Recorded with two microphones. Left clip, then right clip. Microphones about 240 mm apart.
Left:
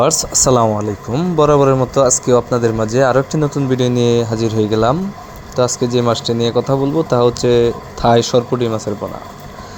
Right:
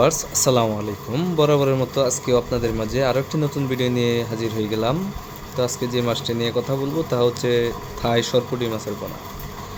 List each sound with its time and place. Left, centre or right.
0.0 s speech: left